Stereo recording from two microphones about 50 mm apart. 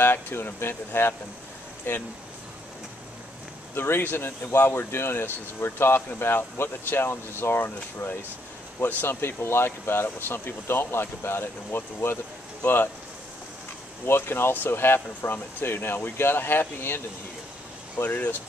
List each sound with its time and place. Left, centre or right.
0.0 s speech: left
3.7 s speech: left
14.0 s speech: left
17.9 s speech: left